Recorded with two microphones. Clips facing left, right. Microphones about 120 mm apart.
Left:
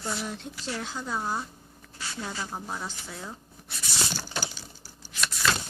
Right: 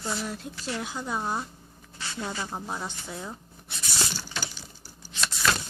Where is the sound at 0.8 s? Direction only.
15° right (ahead or behind).